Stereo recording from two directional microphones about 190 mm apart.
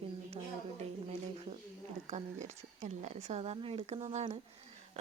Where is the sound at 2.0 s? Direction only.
40° right (ahead or behind).